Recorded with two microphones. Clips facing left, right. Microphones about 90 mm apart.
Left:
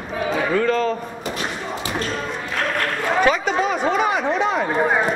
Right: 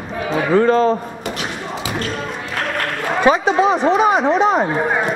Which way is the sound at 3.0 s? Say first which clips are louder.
Right 4 dB; 20° right (ahead or behind).